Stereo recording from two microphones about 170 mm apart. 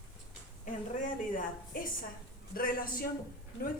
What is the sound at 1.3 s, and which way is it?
A woman's voice, 55° left (ahead or behind).